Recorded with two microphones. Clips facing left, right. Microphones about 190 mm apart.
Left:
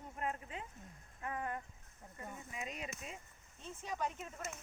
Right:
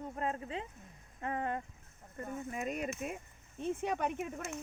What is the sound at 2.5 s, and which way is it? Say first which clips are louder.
Speech: right 9 dB; 50° right (ahead or behind).